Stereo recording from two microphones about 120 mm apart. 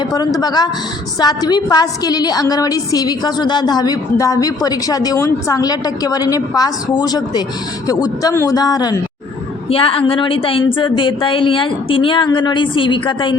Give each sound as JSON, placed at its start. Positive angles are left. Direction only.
{"t": 0.0, "sound": "a woman's voice", "side_deg": 35}
{"t": 9.6, "sound": "a woman's voice", "side_deg": 50}